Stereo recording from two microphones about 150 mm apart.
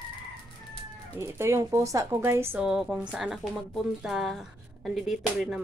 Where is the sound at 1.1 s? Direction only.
15° right (ahead or behind).